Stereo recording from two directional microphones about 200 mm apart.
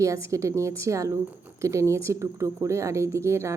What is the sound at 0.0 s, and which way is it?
Speech, 15° right (ahead or behind).